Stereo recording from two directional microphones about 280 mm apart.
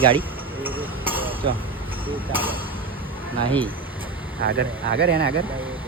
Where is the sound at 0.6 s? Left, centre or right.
Centre.